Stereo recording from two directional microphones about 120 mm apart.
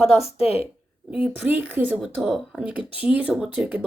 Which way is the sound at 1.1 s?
10° right (ahead or behind).